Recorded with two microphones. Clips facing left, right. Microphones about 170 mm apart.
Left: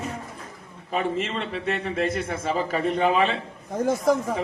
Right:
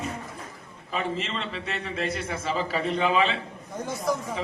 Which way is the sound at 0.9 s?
50° left (ahead or behind).